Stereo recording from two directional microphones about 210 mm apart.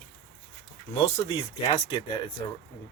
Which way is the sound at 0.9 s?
25° left (ahead or behind).